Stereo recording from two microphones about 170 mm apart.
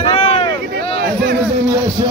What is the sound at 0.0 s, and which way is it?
Boat, 35° left (ahead or behind).